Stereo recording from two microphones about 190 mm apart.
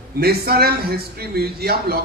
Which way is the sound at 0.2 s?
55° right (ahead or behind).